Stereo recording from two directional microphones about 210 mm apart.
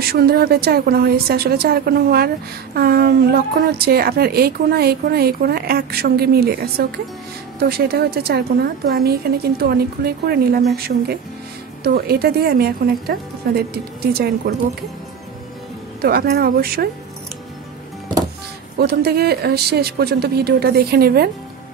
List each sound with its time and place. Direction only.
0.1 s a woman's voice: 50° right (ahead or behind)
11.8 s a woman's voice: 50° right (ahead or behind)
16.0 s a woman's voice: 45° right (ahead or behind)
18.8 s a woman's voice: 50° right (ahead or behind)